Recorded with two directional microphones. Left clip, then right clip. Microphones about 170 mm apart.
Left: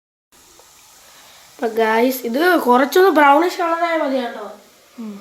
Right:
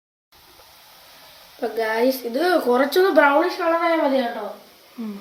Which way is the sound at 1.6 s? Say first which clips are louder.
Left 5 dB; 65° left (ahead or behind).